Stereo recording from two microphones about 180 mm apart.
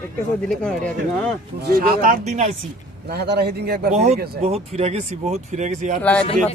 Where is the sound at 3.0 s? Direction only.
65° right (ahead or behind).